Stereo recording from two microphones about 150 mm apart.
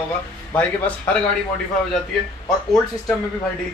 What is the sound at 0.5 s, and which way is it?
Speech, 10° left (ahead or behind).